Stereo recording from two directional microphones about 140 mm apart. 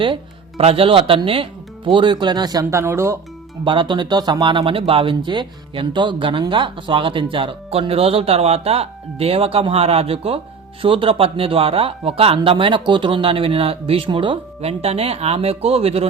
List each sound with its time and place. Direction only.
0.0 s speech: 40° right (ahead or behind); by 3.2 s 20° right (ahead or behind)
3.6 s speech: 35° right (ahead or behind)